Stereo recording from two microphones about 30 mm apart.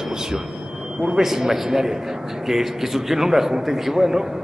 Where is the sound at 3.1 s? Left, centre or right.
Centre.